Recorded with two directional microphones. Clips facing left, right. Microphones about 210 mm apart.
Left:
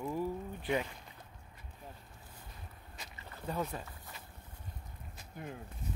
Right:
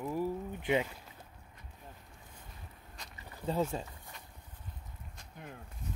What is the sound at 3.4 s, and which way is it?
Speech, 25° right (ahead or behind).